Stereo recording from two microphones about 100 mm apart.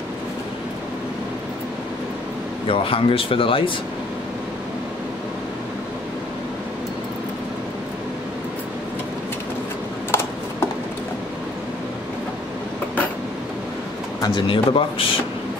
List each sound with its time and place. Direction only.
2.7 s speech: 65° left (ahead or behind)
14.2 s speech: 55° left (ahead or behind)